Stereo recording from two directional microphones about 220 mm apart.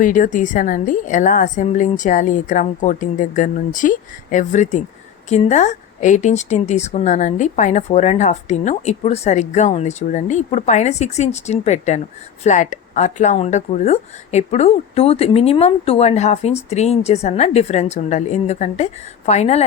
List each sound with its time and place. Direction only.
0.0 s speech: 35° left (ahead or behind)